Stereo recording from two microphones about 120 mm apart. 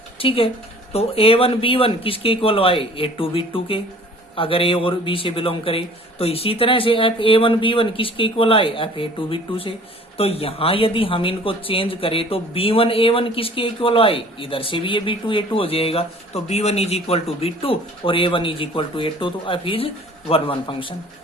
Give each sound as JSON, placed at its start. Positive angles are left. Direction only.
{"t": 0.2, "sound": "speech", "side_deg": 50}